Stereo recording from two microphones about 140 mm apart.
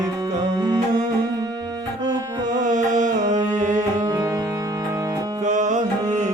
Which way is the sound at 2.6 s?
60° right (ahead or behind).